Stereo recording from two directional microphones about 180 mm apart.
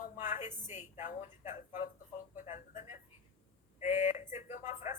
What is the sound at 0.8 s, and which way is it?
Speech, 45° left (ahead or behind).